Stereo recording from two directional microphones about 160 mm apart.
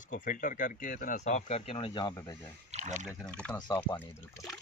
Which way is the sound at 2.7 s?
45° right (ahead or behind).